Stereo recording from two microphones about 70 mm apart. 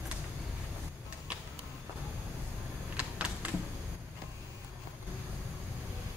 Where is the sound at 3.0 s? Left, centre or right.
Centre.